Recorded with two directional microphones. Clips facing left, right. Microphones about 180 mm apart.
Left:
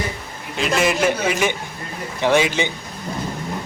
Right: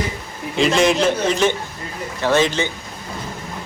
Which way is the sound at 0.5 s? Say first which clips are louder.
Right 4 dB; 5° left (ahead or behind).